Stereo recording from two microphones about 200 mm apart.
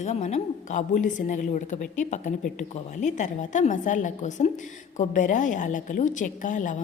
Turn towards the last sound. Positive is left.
turn(degrees=40)  # may be behind; listen again after turning